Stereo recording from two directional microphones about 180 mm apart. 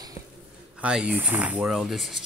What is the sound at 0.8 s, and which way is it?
A child's voice, 5° right (ahead or behind).